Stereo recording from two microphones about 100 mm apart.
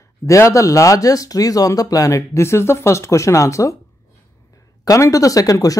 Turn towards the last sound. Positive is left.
turn(degrees=35)  # may be behind; listen again after turning